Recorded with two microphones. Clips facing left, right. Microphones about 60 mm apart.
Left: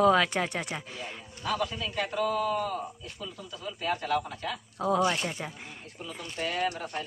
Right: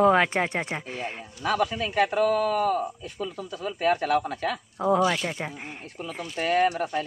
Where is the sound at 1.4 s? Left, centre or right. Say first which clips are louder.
Right 6 dB; right.